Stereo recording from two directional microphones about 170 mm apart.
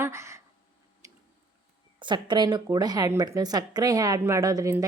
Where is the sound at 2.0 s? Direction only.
25° right (ahead or behind).